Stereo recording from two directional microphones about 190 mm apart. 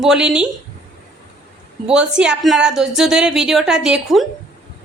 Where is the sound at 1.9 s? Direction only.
5° right (ahead or behind).